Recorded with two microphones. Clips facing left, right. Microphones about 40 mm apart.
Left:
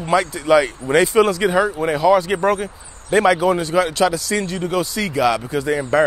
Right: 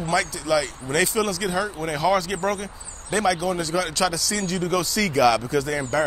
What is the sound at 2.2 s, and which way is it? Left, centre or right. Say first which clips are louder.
Speech: left 7 dB; left.